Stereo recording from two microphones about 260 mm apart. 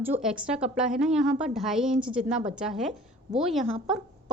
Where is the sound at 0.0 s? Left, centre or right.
Centre.